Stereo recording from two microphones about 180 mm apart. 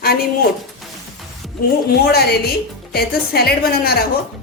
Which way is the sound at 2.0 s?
60° left (ahead or behind).